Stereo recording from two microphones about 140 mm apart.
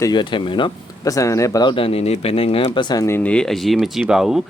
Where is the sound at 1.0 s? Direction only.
25° left (ahead or behind).